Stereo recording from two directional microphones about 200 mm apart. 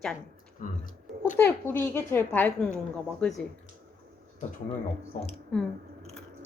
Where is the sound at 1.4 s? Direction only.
10° left (ahead or behind).